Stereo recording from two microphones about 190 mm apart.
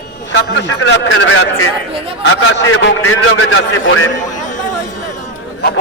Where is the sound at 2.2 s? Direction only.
90° left.